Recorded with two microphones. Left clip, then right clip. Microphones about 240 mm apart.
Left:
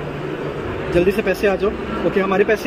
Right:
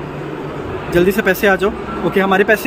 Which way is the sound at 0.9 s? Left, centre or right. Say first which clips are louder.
Right 3 dB; right.